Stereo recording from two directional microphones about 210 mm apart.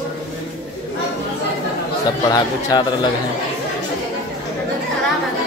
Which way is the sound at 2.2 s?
20° left (ahead or behind).